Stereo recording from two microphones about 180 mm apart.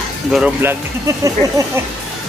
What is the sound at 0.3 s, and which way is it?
Speech, 10° right (ahead or behind).